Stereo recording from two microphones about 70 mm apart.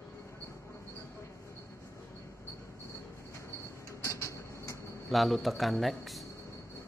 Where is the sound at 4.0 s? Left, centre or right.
Left.